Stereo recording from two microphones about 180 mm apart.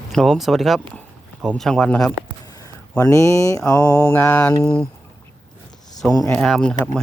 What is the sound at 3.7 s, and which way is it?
Mantra, 15° left (ahead or behind).